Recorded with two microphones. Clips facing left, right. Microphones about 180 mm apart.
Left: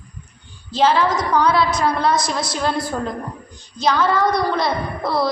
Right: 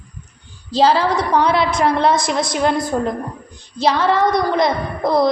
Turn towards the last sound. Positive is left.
turn(degrees=-20)  # may be behind; listen again after turning